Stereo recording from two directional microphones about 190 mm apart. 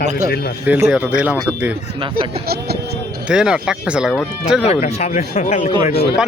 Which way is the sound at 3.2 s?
5° right (ahead or behind).